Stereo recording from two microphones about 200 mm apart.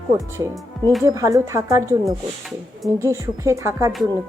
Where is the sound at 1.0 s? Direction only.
15° right (ahead or behind).